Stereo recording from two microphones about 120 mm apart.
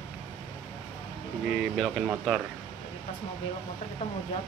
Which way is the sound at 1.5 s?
Centre (ahead or behind).